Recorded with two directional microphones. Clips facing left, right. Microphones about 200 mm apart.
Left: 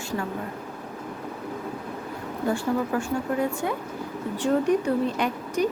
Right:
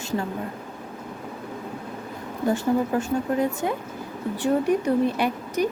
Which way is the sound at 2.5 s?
20° right (ahead or behind).